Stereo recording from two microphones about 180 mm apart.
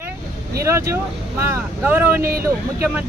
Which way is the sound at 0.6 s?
15° right (ahead or behind).